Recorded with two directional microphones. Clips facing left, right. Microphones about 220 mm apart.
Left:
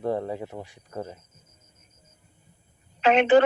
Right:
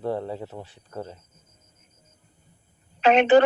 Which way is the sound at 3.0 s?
35° right (ahead or behind).